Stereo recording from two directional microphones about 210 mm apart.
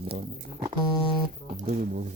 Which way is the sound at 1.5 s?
40° right (ahead or behind).